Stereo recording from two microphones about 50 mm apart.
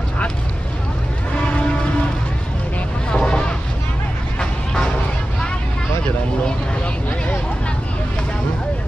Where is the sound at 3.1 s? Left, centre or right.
Centre.